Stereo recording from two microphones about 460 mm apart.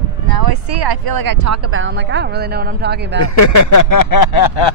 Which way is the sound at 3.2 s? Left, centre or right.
Left.